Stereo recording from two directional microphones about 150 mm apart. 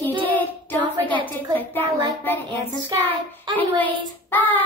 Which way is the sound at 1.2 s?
10° left (ahead or behind).